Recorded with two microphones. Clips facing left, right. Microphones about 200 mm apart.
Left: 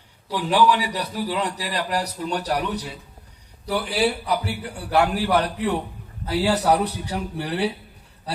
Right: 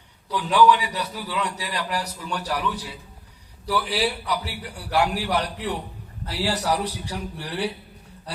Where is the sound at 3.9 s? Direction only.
50° left (ahead or behind).